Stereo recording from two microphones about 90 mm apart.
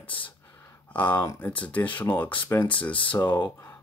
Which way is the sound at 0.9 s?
15° left (ahead or behind).